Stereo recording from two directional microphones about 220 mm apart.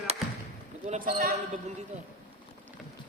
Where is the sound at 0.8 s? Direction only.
35° right (ahead or behind).